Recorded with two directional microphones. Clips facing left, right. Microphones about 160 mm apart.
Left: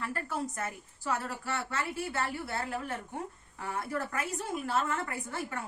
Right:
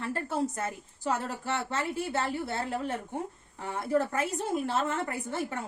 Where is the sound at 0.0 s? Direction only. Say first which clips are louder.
Right 4 dB; 25° right (ahead or behind).